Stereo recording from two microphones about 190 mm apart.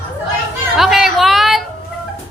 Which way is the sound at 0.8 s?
Centre (ahead or behind).